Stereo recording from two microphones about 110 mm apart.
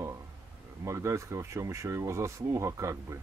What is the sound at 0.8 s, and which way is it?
Speech, 25° right (ahead or behind).